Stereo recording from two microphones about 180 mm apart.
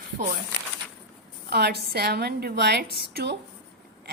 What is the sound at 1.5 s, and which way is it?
A woman's voice, 65° right (ahead or behind).